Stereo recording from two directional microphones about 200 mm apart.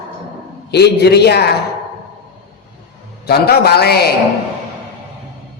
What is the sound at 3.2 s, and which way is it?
Speech, 50° left (ahead or behind).